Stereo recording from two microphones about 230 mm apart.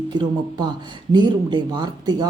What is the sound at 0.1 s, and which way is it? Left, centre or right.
Speech, centre.